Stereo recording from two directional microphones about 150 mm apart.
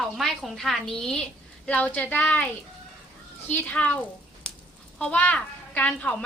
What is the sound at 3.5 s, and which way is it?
Speech, 10° left (ahead or behind).